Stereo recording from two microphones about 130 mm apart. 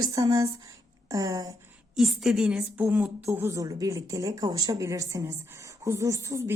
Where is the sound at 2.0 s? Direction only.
5° right (ahead or behind); by 6.5 s 25° right (ahead or behind).